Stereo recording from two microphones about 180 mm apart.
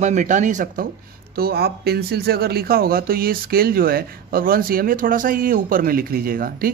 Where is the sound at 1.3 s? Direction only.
60° right (ahead or behind).